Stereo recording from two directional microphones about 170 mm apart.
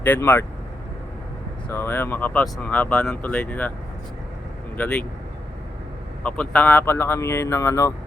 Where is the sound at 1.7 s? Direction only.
15° left (ahead or behind).